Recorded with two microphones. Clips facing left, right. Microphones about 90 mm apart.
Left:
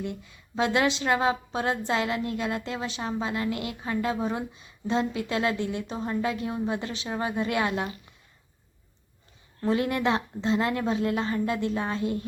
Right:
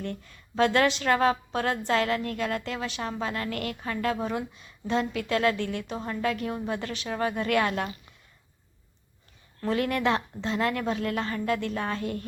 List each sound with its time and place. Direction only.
0.0 s a woman's voice: 15° left (ahead or behind)
9.6 s a woman's voice: 25° left (ahead or behind)